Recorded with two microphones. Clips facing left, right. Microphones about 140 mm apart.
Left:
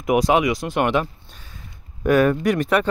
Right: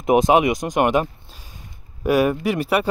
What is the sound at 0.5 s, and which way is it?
Speech, 45° right (ahead or behind).